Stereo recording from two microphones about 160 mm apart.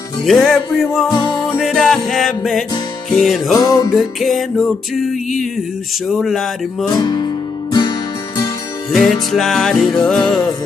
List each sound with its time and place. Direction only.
0.2 s music: centre (ahead or behind)
3.5 s music: 20° left (ahead or behind)
3.9 s music: centre (ahead or behind)
6.9 s music: 25° left (ahead or behind)
8.9 s music: centre (ahead or behind)